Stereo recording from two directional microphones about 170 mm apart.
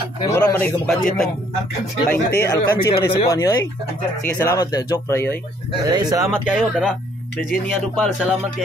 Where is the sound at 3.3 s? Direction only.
20° left (ahead or behind).